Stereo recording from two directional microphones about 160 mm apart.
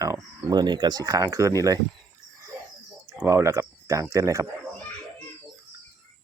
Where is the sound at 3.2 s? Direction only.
15° right (ahead or behind).